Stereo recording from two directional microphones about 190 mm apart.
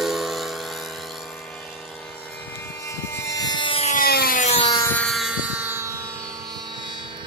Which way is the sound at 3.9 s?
50° left (ahead or behind).